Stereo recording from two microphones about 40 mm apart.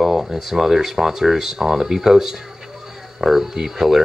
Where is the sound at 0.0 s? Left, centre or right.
Centre.